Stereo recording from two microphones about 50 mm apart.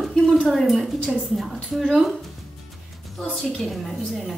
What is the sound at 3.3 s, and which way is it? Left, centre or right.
Speech, centre.